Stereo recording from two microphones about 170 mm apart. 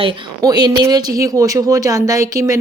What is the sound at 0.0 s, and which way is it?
Speech, 25° right (ahead or behind).